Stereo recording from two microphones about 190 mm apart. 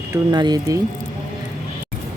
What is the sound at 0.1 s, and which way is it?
Speech, 20° right (ahead or behind).